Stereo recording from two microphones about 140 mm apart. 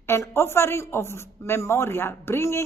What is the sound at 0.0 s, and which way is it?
A woman's voice, 15° left (ahead or behind).